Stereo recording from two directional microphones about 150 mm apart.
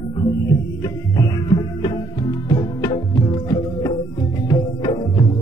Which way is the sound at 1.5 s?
30° left (ahead or behind).